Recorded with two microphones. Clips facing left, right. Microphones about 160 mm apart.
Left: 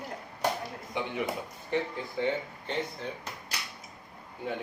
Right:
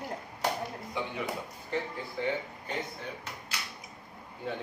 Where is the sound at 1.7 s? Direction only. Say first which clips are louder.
Left 3 dB; 20° left (ahead or behind).